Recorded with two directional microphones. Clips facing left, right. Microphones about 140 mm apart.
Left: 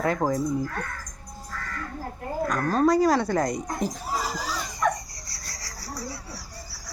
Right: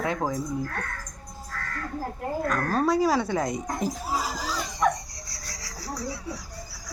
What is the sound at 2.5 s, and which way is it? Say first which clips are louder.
Speech: left 3 dB; 5° right (ahead or behind).